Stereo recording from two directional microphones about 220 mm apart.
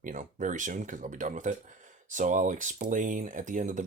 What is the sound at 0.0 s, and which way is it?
Speech, 35° right (ahead or behind).